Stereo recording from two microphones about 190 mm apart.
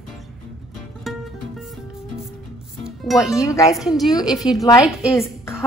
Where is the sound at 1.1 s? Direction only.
Centre (ahead or behind).